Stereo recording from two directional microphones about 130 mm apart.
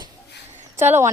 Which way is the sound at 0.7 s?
20° right (ahead or behind).